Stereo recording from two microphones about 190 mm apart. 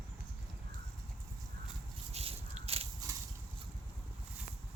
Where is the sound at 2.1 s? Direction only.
30° right (ahead or behind).